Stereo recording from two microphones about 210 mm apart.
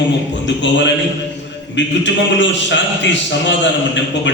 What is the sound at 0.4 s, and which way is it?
A man's voice, 60° left (ahead or behind).